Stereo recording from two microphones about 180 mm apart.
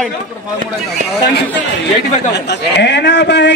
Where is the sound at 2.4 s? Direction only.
70° left (ahead or behind).